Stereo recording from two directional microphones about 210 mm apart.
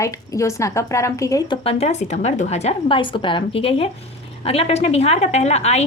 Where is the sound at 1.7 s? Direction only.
30° left (ahead or behind).